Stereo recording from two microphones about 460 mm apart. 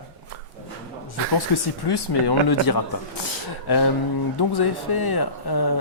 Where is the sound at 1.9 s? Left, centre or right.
Left.